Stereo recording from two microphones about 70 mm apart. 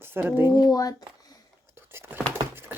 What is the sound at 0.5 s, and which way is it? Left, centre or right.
Speech, left.